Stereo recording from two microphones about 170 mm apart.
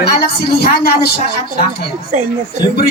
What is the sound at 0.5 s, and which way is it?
Speech, 65° left (ahead or behind).